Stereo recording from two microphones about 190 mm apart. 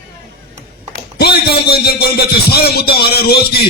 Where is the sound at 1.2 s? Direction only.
55° left (ahead or behind).